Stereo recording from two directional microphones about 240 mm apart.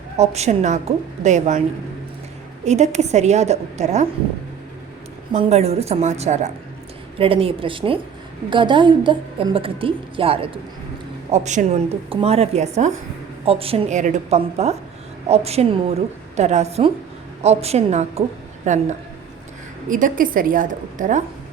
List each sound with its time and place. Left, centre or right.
0.2 s a woman's voice: right
2.6 s a woman's voice: right
5.3 s a woman's voice: right